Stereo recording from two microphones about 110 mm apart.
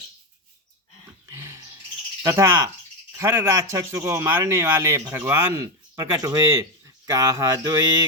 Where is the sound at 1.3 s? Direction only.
25° right (ahead or behind).